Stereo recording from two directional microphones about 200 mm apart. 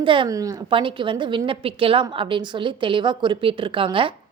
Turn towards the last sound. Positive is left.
turn(degrees=-25)  # may be behind; listen again after turning